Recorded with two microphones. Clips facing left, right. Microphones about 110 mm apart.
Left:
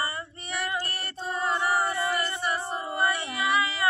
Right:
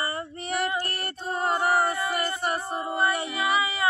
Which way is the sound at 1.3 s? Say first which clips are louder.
Right 2 dB; 45° right (ahead or behind).